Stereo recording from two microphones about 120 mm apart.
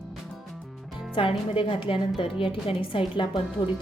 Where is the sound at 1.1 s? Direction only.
45° left (ahead or behind).